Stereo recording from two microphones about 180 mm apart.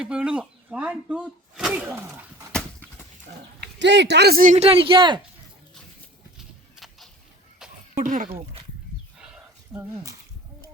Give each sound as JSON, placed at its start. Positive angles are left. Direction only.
{"t": 0.0, "sound": "speech", "side_deg": -5}
{"t": 2.5, "sound": "dog", "side_deg": 5}
{"t": 3.8, "sound": "speech", "side_deg": -75}
{"t": 6.7, "sound": "a sound", "side_deg": 0}
{"t": 7.9, "sound": "speech", "side_deg": -45}
{"t": 9.1, "sound": "a sound", "side_deg": -5}